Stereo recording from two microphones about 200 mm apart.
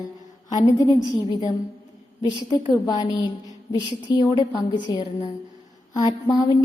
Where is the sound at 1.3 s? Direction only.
20° left (ahead or behind).